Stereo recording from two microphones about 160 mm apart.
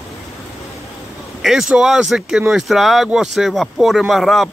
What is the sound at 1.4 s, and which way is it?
Speech, centre (ahead or behind).